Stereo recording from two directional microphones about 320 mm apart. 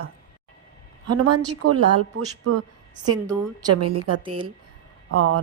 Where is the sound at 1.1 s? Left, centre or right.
Right.